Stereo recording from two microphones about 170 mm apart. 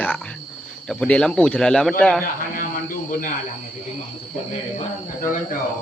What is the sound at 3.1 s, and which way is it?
Speech, 50° left (ahead or behind).